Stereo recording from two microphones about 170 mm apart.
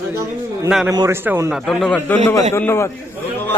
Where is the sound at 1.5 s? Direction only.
Centre (ahead or behind); by 2.9 s 15° left (ahead or behind).